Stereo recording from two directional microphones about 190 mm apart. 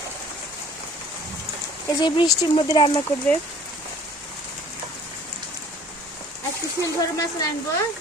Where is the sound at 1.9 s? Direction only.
25° left (ahead or behind).